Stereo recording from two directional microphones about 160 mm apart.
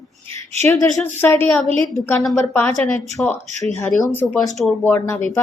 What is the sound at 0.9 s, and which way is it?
Speech, 10° left (ahead or behind).